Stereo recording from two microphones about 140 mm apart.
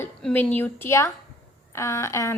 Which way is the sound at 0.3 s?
15° left (ahead or behind).